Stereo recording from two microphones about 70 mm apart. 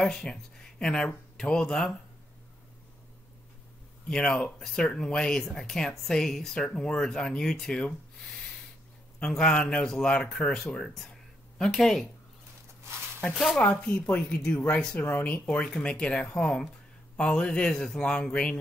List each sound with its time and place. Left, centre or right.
0.0 s speech: centre
4.1 s speech: centre
13.2 s speech: centre